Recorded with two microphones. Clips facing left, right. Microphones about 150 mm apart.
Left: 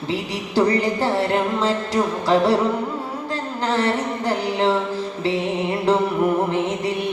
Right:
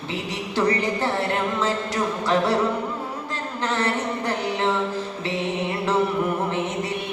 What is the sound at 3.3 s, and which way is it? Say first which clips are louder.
Music: left 5 dB; 30° left (ahead or behind).